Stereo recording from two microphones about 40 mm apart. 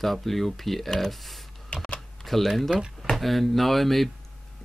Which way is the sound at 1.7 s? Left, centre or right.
Left.